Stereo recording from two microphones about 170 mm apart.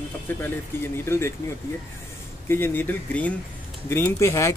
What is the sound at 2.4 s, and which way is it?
Speech, 15° left (ahead or behind).